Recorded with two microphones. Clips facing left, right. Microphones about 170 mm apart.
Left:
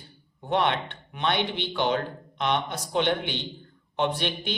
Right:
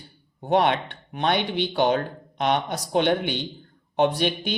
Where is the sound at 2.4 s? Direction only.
50° right (ahead or behind).